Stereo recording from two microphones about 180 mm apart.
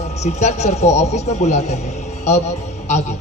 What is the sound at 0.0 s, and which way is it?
A man's voice, 40° left (ahead or behind).